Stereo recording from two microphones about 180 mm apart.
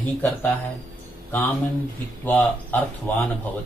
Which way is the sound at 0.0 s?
10° left (ahead or behind).